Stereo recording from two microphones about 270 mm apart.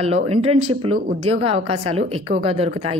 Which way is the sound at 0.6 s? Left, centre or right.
Right.